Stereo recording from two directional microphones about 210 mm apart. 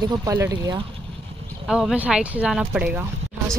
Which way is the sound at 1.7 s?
Centre (ahead or behind).